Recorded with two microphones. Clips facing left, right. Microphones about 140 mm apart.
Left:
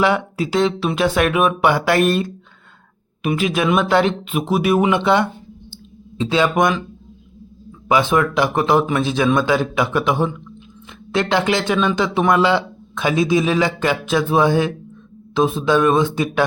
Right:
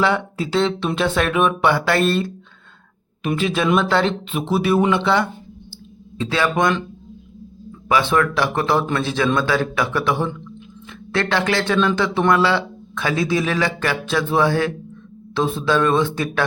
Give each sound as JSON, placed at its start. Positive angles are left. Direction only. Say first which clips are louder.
{"t": 0.0, "sound": "speech", "louder": "left 2 dB", "side_deg": 15}
{"t": 7.9, "sound": "speech", "louder": "left 2 dB", "side_deg": 15}